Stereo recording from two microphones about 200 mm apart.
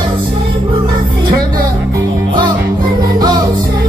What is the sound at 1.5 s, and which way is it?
Music, 20° right (ahead or behind).